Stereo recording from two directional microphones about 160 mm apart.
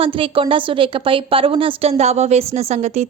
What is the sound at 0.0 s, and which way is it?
A woman's voice, 35° right (ahead or behind).